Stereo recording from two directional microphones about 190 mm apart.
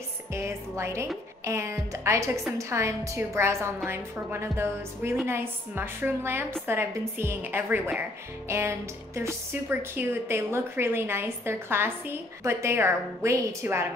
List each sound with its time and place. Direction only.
0.3 s speech: 15° right (ahead or behind)